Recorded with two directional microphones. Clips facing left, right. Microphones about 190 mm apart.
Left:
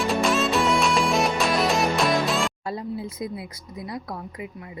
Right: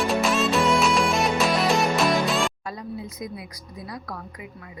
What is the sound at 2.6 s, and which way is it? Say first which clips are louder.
Speech: left 4 dB; 30° left (ahead or behind).